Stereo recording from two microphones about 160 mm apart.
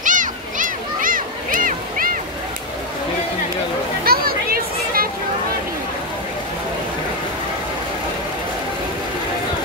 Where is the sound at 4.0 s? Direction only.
70° right (ahead or behind).